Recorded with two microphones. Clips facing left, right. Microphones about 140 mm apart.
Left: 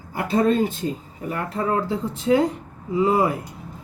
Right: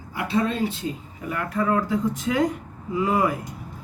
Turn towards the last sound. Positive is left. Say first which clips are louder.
# left 3 dB
turn(degrees=30)  # may be behind; listen again after turning